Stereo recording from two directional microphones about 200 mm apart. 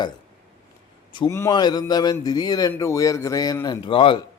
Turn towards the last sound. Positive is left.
turn(degrees=25)  # may be behind; listen again after turning